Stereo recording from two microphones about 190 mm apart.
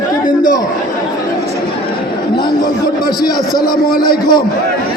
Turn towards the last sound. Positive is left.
turn(degrees=25)  # may be behind; listen again after turning